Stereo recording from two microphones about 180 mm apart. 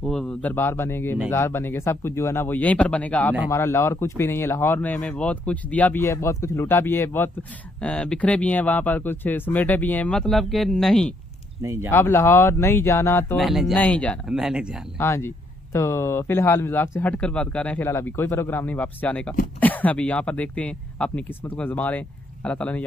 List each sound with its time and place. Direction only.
0.0 s speech: 5° left (ahead or behind)
11.6 s speech: 15° right (ahead or behind)
11.9 s speech: 15° left (ahead or behind)
13.4 s speech: centre (ahead or behind)
14.3 s speech: 5° right (ahead or behind)
15.0 s speech: 15° left (ahead or behind)